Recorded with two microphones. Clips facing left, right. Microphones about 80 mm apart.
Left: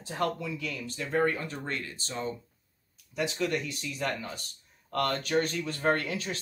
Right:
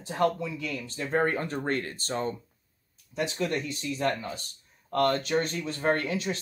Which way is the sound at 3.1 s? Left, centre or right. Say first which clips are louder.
Right 1 dB; right.